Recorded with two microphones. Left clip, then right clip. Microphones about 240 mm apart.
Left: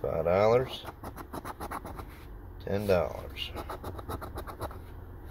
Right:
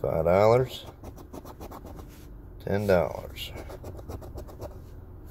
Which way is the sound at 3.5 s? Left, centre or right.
Centre.